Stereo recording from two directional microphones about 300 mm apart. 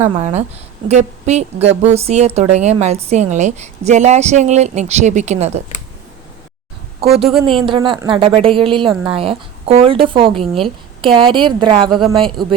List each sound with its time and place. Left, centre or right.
0.0 s a woman's voice: centre
7.0 s speech: centre